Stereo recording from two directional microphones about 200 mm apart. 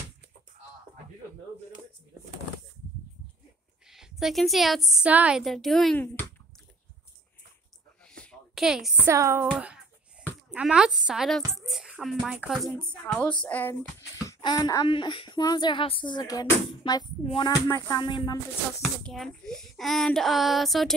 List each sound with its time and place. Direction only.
3.8 s a woman's voice: centre (ahead or behind)
8.2 s a sound: centre (ahead or behind)
9.0 s a woman's voice: 15° right (ahead or behind)
10.2 s a sound: 5° right (ahead or behind)
10.5 s a woman's voice: 5° right (ahead or behind)
14.2 s speech: 20° left (ahead or behind)
18.8 s a woman's voice: centre (ahead or behind)